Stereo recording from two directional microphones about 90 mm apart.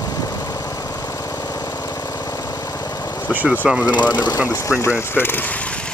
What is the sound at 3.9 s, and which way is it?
Speech, 55° left (ahead or behind).